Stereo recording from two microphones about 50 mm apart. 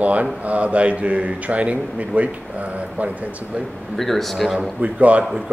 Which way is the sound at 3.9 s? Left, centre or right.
Centre.